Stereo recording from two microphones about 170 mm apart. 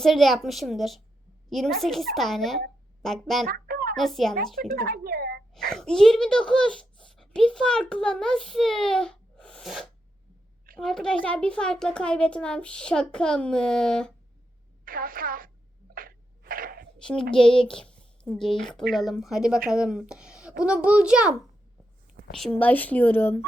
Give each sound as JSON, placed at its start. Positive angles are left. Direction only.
{"t": 0.0, "sound": "speech", "side_deg": 0}
{"t": 3.4, "sound": "a sound", "side_deg": -60}
{"t": 3.9, "sound": "speech", "side_deg": 0}
{"t": 4.7, "sound": "speech", "side_deg": -60}
{"t": 5.5, "sound": "speech", "side_deg": 5}
{"t": 14.8, "sound": "speech", "side_deg": -55}
{"t": 16.0, "sound": "a sound", "side_deg": -60}
{"t": 17.0, "sound": "a woman's voice", "side_deg": 5}
{"t": 22.4, "sound": "speech", "side_deg": 5}